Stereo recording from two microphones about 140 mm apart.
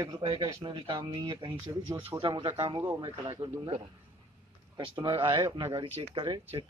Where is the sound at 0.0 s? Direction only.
25° right (ahead or behind).